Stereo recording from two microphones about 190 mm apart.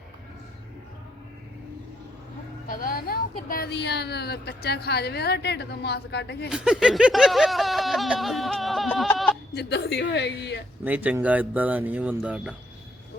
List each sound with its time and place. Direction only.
2.6 s speech: 50° left (ahead or behind)
6.5 s a sound: 5° right (ahead or behind)
9.6 s speech: 60° left (ahead or behind)
10.8 s speech: 10° right (ahead or behind)